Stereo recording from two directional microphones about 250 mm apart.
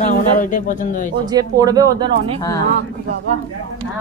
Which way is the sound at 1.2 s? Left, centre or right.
Centre.